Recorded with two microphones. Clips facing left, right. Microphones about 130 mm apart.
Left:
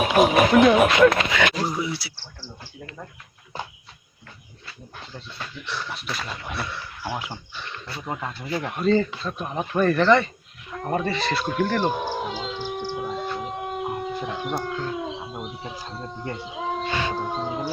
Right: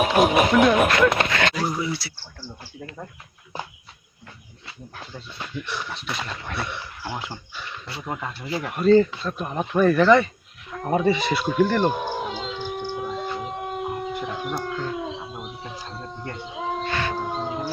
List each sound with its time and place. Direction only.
0.2 s speech: centre (ahead or behind)
5.6 s speech: 15° right (ahead or behind)
6.1 s speech: 5° left (ahead or behind)
6.6 s speech: 20° right (ahead or behind)
7.0 s speech: 10° left (ahead or behind); by 10.2 s 5° right (ahead or behind)
10.7 s a sound: centre (ahead or behind)
16.8 s a sound: 15° left (ahead or behind)
17.2 s howl: centre (ahead or behind)